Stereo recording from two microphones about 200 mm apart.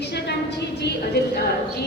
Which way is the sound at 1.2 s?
55° left (ahead or behind).